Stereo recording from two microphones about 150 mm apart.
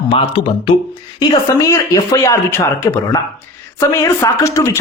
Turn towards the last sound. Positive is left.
turn(degrees=20)  # may be behind; listen again after turning